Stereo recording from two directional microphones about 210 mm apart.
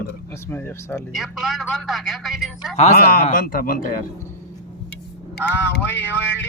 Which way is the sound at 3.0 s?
45° left (ahead or behind).